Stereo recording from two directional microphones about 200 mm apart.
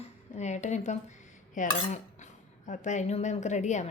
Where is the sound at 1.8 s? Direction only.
35° left (ahead or behind).